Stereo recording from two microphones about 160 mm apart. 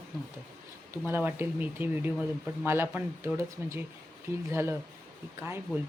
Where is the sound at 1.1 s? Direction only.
15° right (ahead or behind).